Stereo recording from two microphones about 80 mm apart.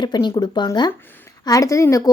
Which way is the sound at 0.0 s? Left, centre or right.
Left.